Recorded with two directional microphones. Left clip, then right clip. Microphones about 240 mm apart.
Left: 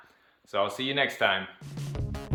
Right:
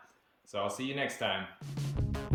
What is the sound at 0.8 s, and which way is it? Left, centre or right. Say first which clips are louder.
Speech: left 8 dB; centre.